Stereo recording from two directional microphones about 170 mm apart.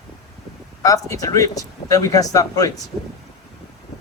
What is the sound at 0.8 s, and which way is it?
A man's voice, 20° left (ahead or behind).